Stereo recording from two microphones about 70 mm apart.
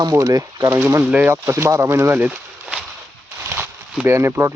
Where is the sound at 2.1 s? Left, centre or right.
Right.